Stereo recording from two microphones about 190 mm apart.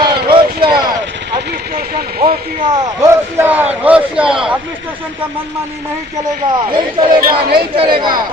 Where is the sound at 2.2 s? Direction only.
30° right (ahead or behind).